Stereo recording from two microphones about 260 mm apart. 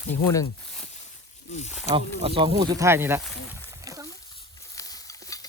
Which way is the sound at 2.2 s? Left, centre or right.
Right.